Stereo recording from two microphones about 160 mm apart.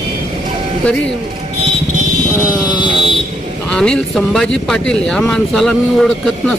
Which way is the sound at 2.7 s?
30° left (ahead or behind).